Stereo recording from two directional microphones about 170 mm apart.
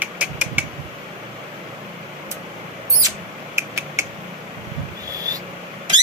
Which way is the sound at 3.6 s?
15° right (ahead or behind).